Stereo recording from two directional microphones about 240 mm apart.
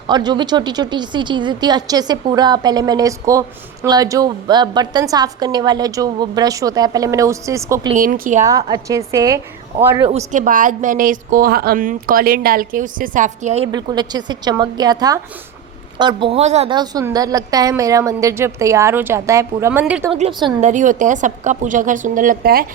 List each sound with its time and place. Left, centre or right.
0.1 s a woman's voice: centre
7.9 s a woman's voice: right
8.4 s a woman's voice: centre
10.0 s a woman's voice: right; by 20.1 s centre
20.1 s a woman's voice: right